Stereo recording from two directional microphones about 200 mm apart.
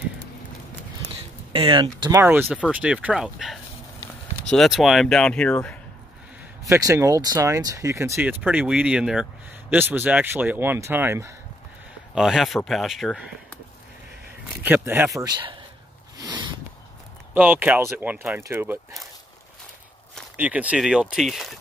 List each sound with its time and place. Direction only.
1.5 s speech: 25° right (ahead or behind)
2.0 s speech: 10° right (ahead or behind); by 5.8 s 5° left (ahead or behind)
6.6 s speech: 15° right (ahead or behind)
12.2 s speech: centre (ahead or behind)
14.6 s speech: 10° right (ahead or behind)
15.2 s speech: 20° right (ahead or behind)
16.2 s a sound: 20° right (ahead or behind)
17.3 s speech: 10° right (ahead or behind)
20.3 s speech: 5° right (ahead or behind)